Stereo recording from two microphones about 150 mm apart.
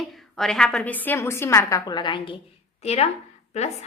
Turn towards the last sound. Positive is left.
turn(degrees=50)  # may be behind; listen again after turning